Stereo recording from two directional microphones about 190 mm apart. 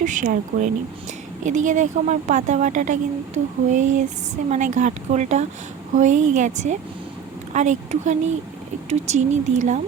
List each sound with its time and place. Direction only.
0.0 s a woman's voice: 40° right (ahead or behind)